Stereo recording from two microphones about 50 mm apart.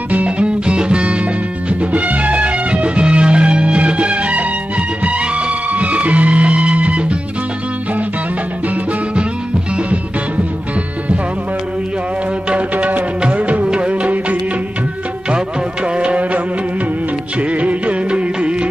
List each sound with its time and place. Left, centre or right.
0.1 s music: right
12.4 s music: right
15.3 s music: right
17.4 s music of bollywood: right